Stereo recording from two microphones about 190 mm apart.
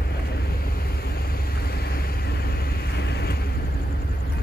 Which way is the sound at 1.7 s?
55° left (ahead or behind).